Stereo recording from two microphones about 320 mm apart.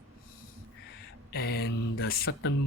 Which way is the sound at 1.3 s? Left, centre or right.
Left.